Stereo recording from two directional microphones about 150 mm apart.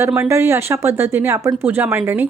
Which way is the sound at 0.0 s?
15° right (ahead or behind).